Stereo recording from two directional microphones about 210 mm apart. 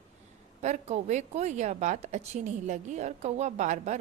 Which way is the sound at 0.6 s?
30° right (ahead or behind).